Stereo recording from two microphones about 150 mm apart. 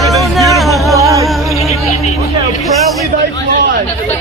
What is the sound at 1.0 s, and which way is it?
Music, 20° right (ahead or behind).